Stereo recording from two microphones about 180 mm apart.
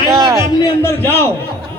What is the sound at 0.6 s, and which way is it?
Speech, 15° left (ahead or behind).